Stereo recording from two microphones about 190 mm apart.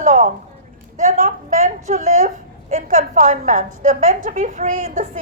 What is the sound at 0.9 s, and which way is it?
A woman's voice, 45° right (ahead or behind).